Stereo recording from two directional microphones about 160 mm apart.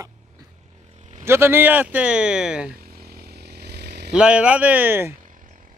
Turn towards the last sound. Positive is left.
turn(degrees=-15)  # may be behind; listen again after turning